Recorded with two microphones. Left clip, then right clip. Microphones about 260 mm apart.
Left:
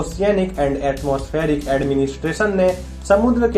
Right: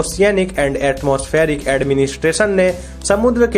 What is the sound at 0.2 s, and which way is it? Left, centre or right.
Speech, right.